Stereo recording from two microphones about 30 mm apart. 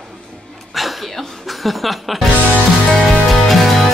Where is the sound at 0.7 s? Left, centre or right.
Centre.